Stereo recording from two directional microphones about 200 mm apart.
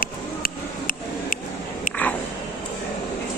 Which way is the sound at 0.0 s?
45° left (ahead or behind).